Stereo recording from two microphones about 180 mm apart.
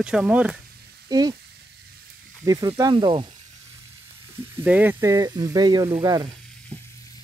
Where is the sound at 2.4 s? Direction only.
20° right (ahead or behind).